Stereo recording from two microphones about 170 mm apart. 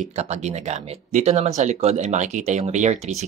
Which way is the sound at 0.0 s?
40° right (ahead or behind).